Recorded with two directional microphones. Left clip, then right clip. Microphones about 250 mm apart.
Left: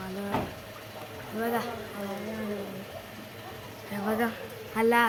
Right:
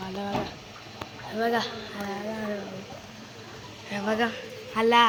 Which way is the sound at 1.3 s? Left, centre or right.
Centre.